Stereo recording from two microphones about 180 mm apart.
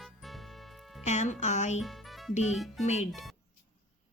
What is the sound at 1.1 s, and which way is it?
Speech, 40° left (ahead or behind).